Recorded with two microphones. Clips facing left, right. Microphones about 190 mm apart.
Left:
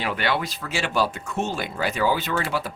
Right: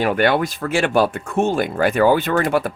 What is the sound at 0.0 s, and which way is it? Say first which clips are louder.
Speech: right 8 dB; 50° right (ahead or behind).